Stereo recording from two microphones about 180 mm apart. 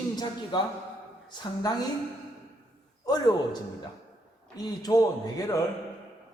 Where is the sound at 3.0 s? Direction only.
20° left (ahead or behind).